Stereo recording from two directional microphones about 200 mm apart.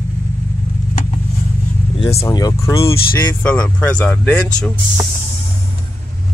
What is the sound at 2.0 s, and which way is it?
Speech, 25° left (ahead or behind).